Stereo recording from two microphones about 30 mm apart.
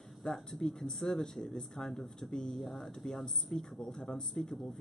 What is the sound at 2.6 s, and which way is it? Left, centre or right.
Speech, centre.